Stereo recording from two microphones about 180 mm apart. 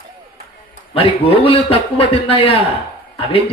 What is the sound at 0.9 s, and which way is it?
A man's voice, 30° left (ahead or behind).